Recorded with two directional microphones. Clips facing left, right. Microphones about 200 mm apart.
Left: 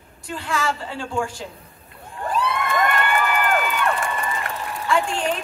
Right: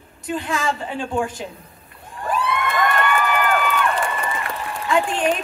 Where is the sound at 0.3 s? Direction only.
20° right (ahead or behind).